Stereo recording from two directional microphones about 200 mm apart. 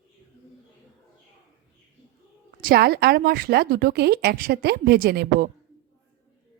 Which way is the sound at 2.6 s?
50° right (ahead or behind).